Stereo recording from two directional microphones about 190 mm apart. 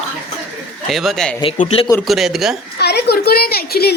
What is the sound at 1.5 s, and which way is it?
Speech, 35° left (ahead or behind).